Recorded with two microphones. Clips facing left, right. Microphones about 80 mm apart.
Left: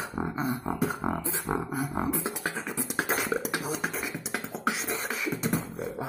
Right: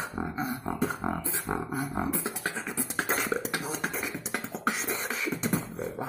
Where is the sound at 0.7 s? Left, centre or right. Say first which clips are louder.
Left 1 dB; centre.